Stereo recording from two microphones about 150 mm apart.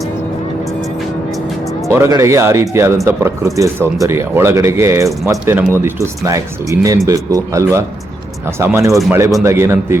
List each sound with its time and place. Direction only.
1.9 s speech: 20° right (ahead or behind)
8.9 s a man's voice: centre (ahead or behind)
9.4 s speech: 20° right (ahead or behind)